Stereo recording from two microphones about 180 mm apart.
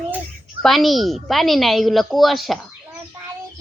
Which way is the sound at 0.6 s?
Centre (ahead or behind).